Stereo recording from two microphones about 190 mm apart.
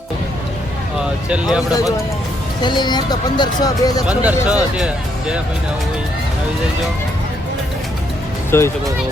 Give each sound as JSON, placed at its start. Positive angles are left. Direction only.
{"t": 1.3, "sound": "speech", "side_deg": -5}
{"t": 2.6, "sound": "speech", "side_deg": 25}
{"t": 4.1, "sound": "speech", "side_deg": -5}
{"t": 8.4, "sound": "speech", "side_deg": 15}